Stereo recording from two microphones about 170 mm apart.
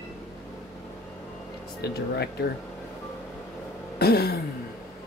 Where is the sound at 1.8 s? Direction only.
70° left (ahead or behind).